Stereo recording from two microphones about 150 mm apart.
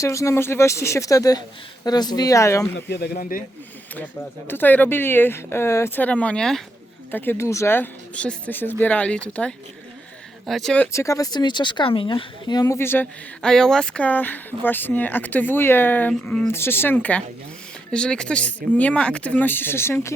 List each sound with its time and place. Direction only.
0.0 s speech: 20° left (ahead or behind)
2.9 s speech: 80° left
3.9 s speech: 15° left (ahead or behind)
10.9 s speech: 20° left (ahead or behind)